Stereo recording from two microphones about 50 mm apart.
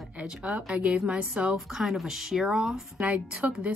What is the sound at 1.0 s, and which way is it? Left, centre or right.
Speech, right.